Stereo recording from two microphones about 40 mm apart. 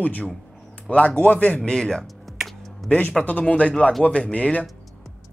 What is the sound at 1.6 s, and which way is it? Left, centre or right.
Speech, centre.